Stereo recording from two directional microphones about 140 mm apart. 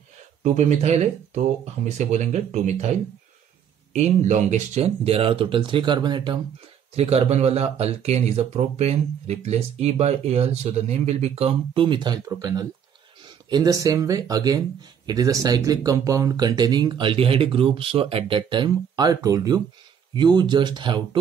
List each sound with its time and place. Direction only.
0.4 s speech: 60° right (ahead or behind); by 6.4 s 35° right (ahead or behind)
7.0 s speech: 50° right (ahead or behind)